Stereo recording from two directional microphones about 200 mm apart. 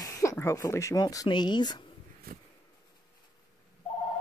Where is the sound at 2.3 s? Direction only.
50° right (ahead or behind).